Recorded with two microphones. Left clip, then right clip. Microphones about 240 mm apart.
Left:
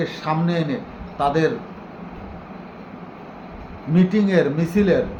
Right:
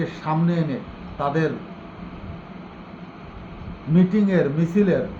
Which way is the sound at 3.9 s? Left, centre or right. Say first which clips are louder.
Left 2 dB; centre.